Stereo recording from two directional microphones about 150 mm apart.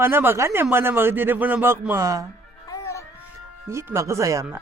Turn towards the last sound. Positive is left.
turn(degrees=-20)  # may be behind; listen again after turning